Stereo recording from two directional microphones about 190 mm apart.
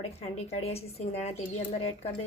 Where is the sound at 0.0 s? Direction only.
35° left (ahead or behind).